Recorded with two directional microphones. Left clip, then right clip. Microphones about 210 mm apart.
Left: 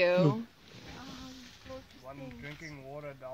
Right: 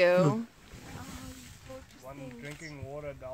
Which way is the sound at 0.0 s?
35° right (ahead or behind).